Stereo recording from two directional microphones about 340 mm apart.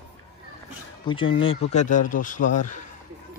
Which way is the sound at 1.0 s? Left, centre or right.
Centre.